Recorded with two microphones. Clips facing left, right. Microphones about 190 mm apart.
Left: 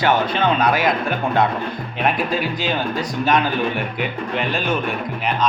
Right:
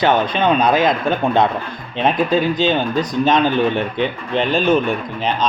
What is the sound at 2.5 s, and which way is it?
Speech, 20° right (ahead or behind).